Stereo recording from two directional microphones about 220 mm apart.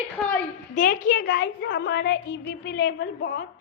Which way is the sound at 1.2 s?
50° left (ahead or behind).